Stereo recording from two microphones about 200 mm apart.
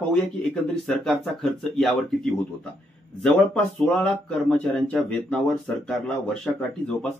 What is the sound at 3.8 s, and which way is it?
Speech, 5° left (ahead or behind).